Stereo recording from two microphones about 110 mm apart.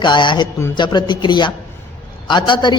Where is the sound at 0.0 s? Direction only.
45° left (ahead or behind).